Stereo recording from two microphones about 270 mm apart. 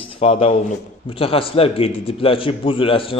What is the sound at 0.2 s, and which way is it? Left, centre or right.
A man's voice, left.